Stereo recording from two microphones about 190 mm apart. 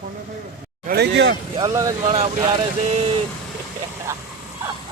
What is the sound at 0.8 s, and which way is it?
Speech, 60° right (ahead or behind).